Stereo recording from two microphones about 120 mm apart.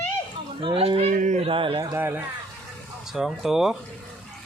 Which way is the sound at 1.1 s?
90° right.